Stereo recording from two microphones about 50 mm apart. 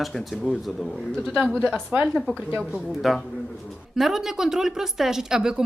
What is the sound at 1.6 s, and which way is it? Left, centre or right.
Speech, centre.